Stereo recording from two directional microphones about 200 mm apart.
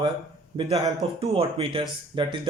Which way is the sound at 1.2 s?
30° right (ahead or behind).